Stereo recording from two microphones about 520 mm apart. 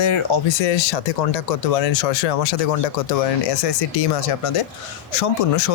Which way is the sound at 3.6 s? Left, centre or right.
Left.